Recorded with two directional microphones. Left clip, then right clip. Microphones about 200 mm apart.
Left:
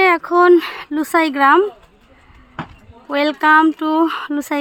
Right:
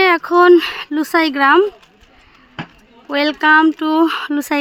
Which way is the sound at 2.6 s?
55° right (ahead or behind).